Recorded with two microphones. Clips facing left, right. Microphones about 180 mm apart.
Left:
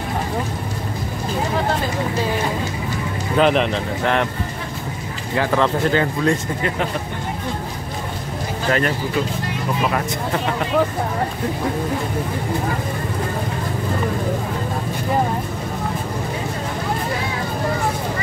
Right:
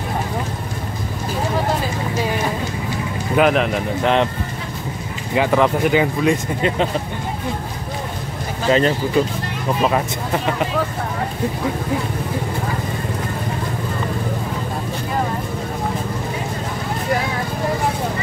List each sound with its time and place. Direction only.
3.3 s speech: 5° right (ahead or behind)
4.0 s speech: 20° right (ahead or behind)
5.3 s speech: 15° right (ahead or behind)
8.6 s speech: 20° right (ahead or behind)